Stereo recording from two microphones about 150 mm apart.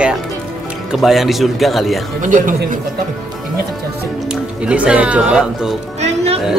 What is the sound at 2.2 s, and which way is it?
Speech, 60° right (ahead or behind).